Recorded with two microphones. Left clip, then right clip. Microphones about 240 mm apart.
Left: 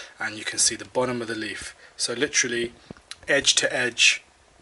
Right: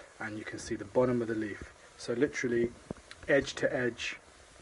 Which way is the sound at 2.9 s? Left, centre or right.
Left.